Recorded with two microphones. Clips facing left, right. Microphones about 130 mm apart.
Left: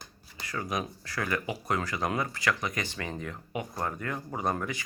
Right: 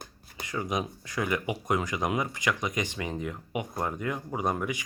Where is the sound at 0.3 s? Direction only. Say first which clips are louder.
Right 2 dB; 20° right (ahead or behind).